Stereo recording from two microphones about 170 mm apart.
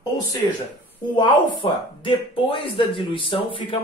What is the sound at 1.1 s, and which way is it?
Speech, 30° left (ahead or behind).